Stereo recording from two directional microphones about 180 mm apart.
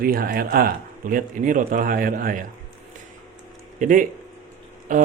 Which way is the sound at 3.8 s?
45° right (ahead or behind).